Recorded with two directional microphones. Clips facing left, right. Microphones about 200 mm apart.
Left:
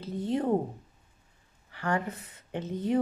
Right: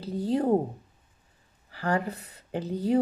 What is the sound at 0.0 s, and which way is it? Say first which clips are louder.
Speech: right 3 dB; 35° right (ahead or behind).